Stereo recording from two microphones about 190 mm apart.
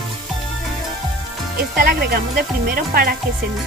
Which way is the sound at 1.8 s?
55° right (ahead or behind).